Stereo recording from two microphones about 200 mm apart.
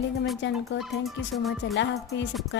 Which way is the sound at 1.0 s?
Centre (ahead or behind).